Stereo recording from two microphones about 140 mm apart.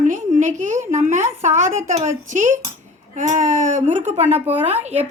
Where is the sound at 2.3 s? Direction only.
65° right (ahead or behind); by 5.0 s 50° right (ahead or behind).